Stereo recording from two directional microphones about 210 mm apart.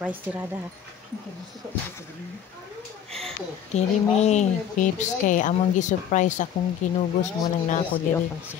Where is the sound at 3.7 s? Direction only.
30° left (ahead or behind).